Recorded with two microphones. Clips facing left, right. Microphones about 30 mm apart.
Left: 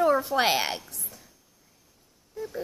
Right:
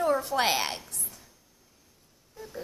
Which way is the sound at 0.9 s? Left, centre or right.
Centre.